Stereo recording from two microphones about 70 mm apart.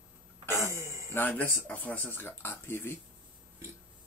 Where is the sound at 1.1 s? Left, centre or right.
Left.